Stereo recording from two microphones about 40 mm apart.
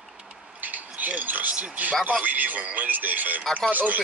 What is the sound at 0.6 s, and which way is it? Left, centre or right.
Speech, right.